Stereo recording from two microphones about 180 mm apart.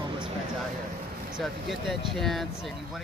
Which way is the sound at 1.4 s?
Centre (ahead or behind).